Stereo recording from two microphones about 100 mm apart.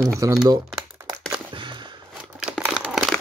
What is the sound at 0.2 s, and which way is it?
Speech, 35° right (ahead or behind).